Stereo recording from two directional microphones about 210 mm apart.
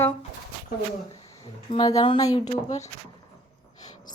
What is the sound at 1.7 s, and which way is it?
Speech, 20° left (ahead or behind).